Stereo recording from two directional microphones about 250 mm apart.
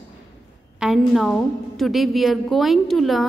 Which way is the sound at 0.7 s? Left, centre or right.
Centre.